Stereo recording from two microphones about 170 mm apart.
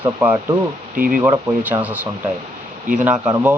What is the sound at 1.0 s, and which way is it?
Speech, 55° right (ahead or behind).